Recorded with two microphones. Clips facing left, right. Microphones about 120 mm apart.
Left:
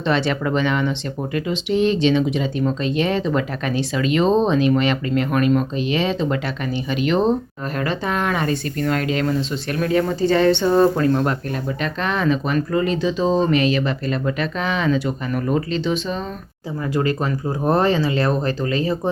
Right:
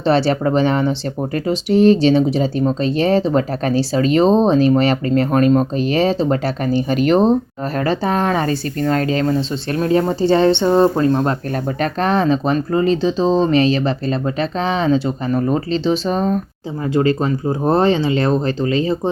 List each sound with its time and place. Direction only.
0.0 s speech: 35° right (ahead or behind)
11.8 s speech: 35° right (ahead or behind)
16.0 s speech: 45° right (ahead or behind)
16.9 s speech: 25° right (ahead or behind)